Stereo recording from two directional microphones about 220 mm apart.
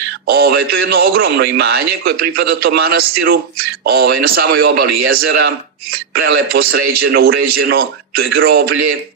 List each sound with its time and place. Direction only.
0.3 s a man's voice: 45° right (ahead or behind)